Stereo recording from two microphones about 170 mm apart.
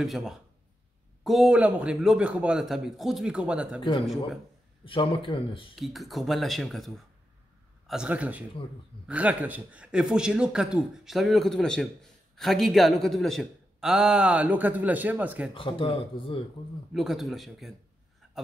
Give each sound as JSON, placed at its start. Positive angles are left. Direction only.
{"t": 0.0, "sound": "a man's voice", "side_deg": 0}
{"t": 4.8, "sound": "speech", "side_deg": 30}
{"t": 5.8, "sound": "a man's voice", "side_deg": 0}
{"t": 15.5, "sound": "a man's voice", "side_deg": 30}
{"t": 16.9, "sound": "a man's voice", "side_deg": 0}